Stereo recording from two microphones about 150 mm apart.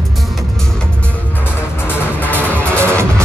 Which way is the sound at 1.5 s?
15° left (ahead or behind).